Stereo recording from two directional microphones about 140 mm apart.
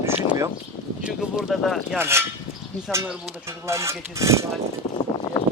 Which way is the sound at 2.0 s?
20° right (ahead or behind).